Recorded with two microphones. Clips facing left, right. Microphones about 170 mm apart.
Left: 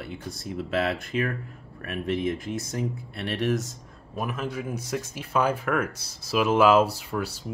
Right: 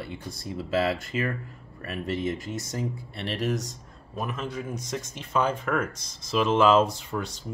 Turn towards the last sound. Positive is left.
turn(degrees=5)  # may be behind; listen again after turning